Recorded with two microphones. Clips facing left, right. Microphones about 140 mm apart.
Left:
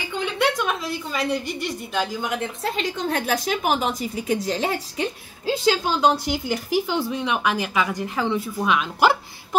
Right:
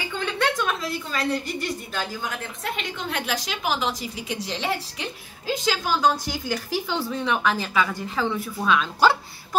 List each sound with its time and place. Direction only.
0.2 s a sound: 10° left (ahead or behind)
2.0 s a woman's voice: 20° left (ahead or behind); by 4.6 s 40° left (ahead or behind)
5.5 s speech: 25° left (ahead or behind)